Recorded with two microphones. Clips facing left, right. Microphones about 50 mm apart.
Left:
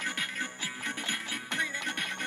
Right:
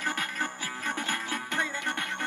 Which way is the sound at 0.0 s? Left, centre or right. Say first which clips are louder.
Right 4 dB; right.